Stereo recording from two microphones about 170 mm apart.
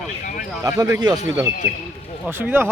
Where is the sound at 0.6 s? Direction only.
20° right (ahead or behind).